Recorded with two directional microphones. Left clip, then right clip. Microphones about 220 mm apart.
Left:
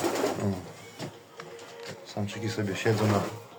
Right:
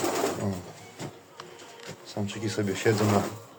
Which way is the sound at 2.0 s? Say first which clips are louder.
Right 2 dB; 10° right (ahead or behind).